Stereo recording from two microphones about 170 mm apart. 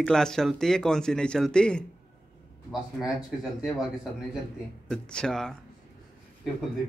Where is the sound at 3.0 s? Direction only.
Centre (ahead or behind).